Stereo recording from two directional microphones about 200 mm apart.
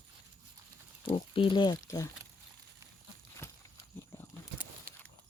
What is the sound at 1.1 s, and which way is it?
Speech, 25° left (ahead or behind).